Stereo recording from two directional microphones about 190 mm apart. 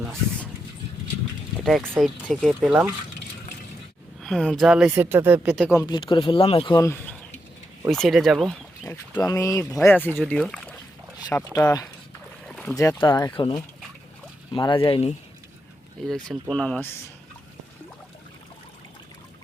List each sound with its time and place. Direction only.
1.6 s speech: centre (ahead or behind)
4.2 s speech: centre (ahead or behind)
5.7 s speech: 20° left (ahead or behind); by 8.5 s centre (ahead or behind)
8.8 s speech: 15° left (ahead or behind)
11.5 s speech: 20° left (ahead or behind)
12.5 s boat: 5° left (ahead or behind)
12.7 s speech: 15° left (ahead or behind)
16.0 s speech: centre (ahead or behind)